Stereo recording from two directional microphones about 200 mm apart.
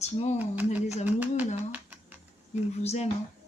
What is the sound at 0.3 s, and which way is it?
Speech, 10° right (ahead or behind).